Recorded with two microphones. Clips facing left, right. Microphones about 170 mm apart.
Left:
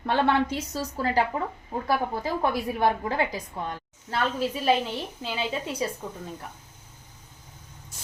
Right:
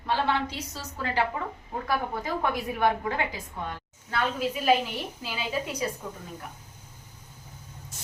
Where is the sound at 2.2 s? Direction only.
30° left (ahead or behind).